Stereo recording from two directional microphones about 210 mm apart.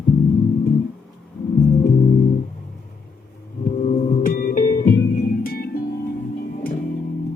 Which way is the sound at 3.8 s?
30° left (ahead or behind).